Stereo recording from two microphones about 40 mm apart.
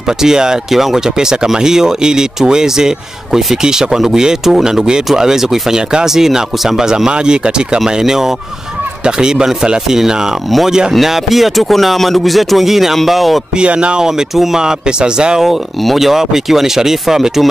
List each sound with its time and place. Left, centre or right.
0.2 s speech: centre
7.1 s speech: right
7.8 s speech: centre
13.6 s speech: right; by 14.6 s centre
14.6 s speech: centre
15.4 s speech: centre